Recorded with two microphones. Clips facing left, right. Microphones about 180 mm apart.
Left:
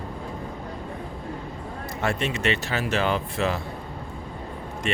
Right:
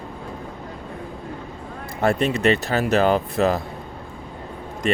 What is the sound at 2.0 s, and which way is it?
Speech, 35° right (ahead or behind).